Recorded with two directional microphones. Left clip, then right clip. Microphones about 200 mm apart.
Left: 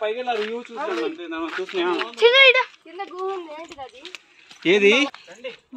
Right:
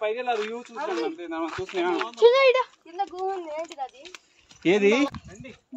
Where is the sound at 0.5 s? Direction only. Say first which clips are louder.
Left 4 dB; 5° left (ahead or behind).